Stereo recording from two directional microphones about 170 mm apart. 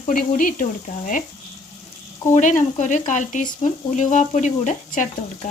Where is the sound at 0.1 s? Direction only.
55° left (ahead or behind).